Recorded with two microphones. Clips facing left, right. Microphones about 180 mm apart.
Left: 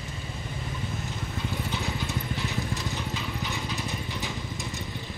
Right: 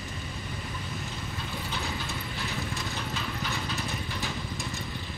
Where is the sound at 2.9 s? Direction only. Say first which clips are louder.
Left 1 dB; 15° left (ahead or behind).